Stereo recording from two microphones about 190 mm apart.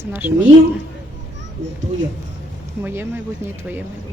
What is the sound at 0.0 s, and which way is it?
Speech, 10° right (ahead or behind).